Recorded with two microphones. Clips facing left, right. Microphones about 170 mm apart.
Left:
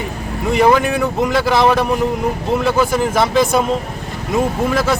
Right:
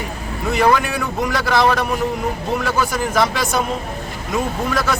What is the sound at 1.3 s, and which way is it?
Speech, 25° left (ahead or behind).